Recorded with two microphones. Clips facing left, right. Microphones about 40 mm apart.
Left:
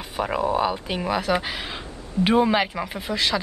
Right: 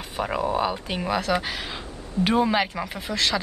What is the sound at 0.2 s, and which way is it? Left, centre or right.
Speech, centre.